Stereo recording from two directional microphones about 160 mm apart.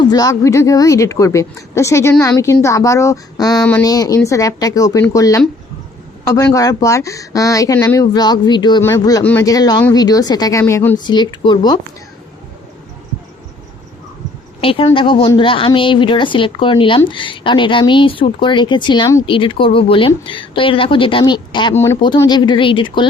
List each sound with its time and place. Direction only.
0.0 s a man's voice: 25° left (ahead or behind)
9.5 s speech: 25° left (ahead or behind)
14.6 s a woman's voice: 35° left (ahead or behind)